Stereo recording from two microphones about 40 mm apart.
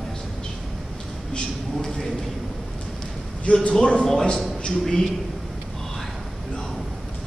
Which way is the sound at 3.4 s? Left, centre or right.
Left.